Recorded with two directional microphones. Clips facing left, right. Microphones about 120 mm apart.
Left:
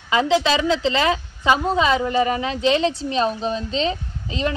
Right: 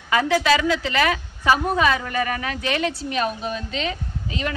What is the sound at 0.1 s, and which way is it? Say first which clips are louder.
A woman's voice: left 1 dB; 20° left (ahead or behind).